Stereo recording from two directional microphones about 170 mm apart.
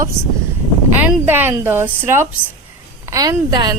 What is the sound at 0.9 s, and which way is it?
A woman's voice, 10° right (ahead or behind).